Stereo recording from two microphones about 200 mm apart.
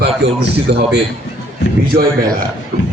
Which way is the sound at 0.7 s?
55° right (ahead or behind).